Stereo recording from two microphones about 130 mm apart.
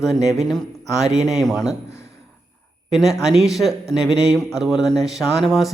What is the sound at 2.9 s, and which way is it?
Speech, 5° right (ahead or behind).